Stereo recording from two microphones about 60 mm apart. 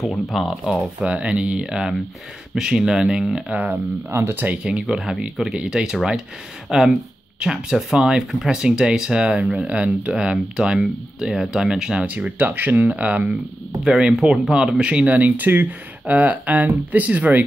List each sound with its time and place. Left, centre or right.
0.0 s speech: centre
1.0 s speech: centre
3.5 s speech: right
4.1 s speech: right
4.6 s speech: centre